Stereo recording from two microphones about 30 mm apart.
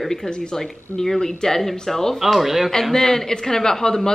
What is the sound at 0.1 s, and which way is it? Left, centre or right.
Speech, centre.